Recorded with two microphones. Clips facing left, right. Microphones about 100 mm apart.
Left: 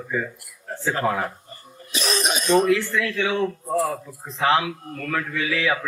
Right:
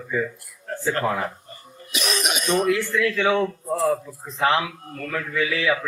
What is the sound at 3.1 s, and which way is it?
Speech, 40° right (ahead or behind).